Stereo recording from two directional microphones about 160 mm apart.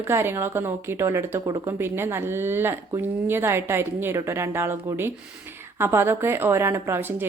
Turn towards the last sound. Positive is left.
turn(degrees=-15)  # may be behind; listen again after turning